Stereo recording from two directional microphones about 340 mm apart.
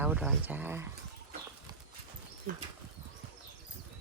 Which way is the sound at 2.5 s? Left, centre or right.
Right.